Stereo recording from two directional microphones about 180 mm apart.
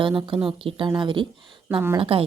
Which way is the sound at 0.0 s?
30° right (ahead or behind).